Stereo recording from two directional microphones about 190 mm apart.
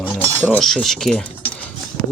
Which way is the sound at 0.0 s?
10° left (ahead or behind).